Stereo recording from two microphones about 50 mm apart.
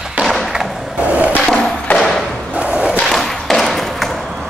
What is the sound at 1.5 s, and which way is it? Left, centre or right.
Thump, centre.